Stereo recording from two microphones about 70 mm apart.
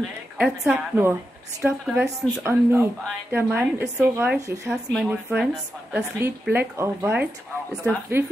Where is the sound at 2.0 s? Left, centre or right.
Right.